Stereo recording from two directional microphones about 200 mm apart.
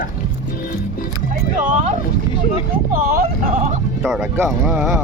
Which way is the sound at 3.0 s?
50° right (ahead or behind).